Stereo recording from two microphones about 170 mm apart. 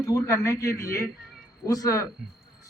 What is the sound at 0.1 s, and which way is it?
A man's voice, 15° left (ahead or behind).